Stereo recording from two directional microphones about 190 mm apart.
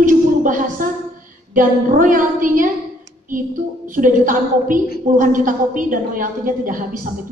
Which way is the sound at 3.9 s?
45° right (ahead or behind).